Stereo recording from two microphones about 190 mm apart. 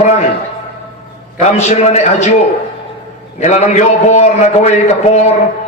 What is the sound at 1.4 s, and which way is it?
Speech, 35° left (ahead or behind).